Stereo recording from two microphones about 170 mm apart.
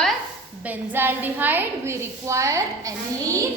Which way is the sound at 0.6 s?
10° right (ahead or behind).